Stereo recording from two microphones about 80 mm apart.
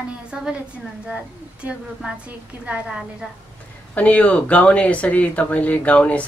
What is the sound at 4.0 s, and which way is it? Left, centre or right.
Speech, centre.